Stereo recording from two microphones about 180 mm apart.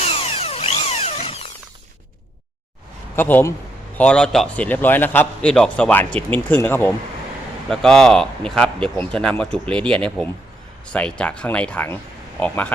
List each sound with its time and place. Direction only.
0.0 s tools: 35° left (ahead or behind)
3.2 s a man's voice: 10° left (ahead or behind)